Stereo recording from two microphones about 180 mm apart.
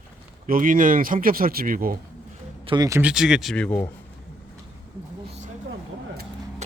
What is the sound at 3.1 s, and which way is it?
Speech, centre (ahead or behind).